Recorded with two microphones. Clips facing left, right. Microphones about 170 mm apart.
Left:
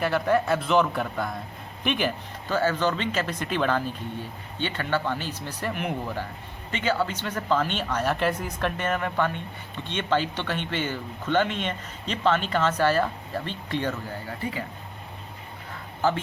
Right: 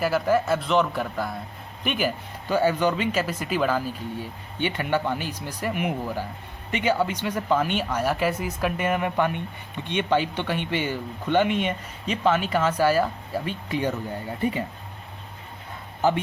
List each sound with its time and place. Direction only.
0.0 s a man's voice: 5° right (ahead or behind)
14.3 s speech: 20° right (ahead or behind)